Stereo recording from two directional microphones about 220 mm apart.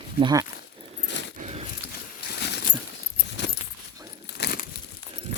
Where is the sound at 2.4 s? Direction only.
50° left (ahead or behind).